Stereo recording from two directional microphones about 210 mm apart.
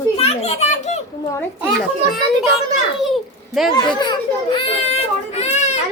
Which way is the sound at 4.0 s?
20° left (ahead or behind).